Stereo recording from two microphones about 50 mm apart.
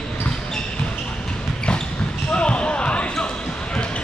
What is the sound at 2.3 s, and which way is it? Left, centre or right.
Basketball bounce, left.